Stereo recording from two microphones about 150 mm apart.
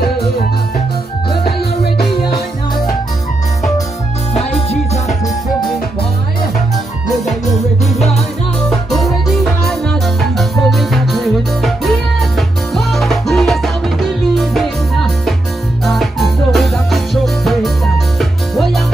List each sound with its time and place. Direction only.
4.3 s music: 45° left (ahead or behind)
8.6 s music: centre (ahead or behind)